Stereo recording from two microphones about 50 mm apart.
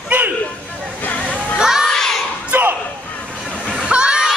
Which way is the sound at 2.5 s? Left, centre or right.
Right.